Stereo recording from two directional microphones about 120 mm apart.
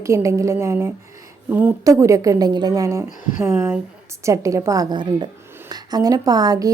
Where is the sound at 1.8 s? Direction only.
25° right (ahead or behind).